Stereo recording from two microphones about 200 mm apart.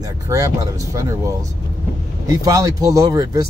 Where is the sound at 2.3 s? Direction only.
15° right (ahead or behind).